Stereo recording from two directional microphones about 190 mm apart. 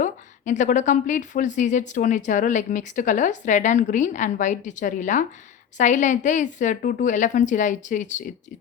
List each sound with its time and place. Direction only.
0.0 s a woman's voice: 40° left (ahead or behind)